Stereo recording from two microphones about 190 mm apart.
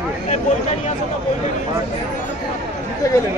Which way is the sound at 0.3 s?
35° left (ahead or behind).